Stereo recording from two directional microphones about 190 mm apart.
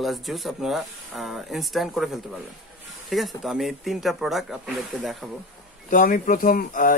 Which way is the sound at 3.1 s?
Centre (ahead or behind).